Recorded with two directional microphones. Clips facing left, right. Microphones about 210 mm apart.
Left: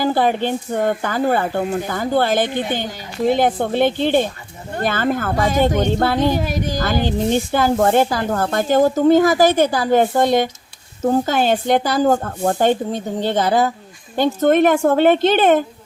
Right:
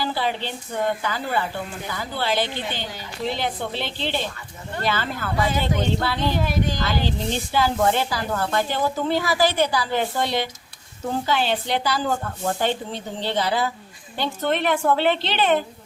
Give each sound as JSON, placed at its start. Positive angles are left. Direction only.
{"t": 0.0, "sound": "a woman's voice", "side_deg": 50}